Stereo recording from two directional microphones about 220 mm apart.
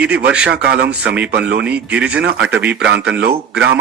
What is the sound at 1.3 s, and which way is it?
Speech, 50° right (ahead or behind).